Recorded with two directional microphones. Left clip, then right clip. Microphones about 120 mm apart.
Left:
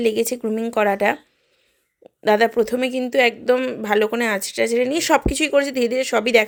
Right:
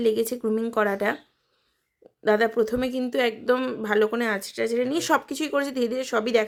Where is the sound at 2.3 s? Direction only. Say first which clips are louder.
Left 5 dB; 30° left (ahead or behind).